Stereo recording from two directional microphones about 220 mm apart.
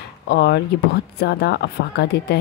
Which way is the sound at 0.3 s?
50° left (ahead or behind).